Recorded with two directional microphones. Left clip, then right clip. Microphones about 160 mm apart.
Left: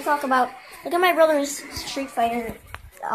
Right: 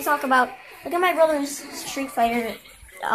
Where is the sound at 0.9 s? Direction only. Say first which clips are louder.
Left 2 dB; 35° left (ahead or behind).